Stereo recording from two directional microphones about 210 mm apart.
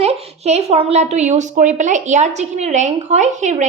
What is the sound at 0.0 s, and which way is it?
A woman's voice, 30° right (ahead or behind).